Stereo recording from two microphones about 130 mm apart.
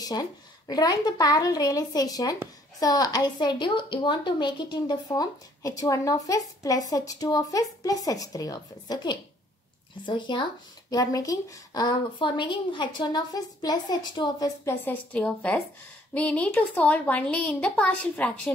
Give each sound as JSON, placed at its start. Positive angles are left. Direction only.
{"t": 0.0, "sound": "a woman's voice", "side_deg": 30}
{"t": 14.6, "sound": "a woman's voice", "side_deg": 20}
{"t": 15.1, "sound": "speech", "side_deg": 5}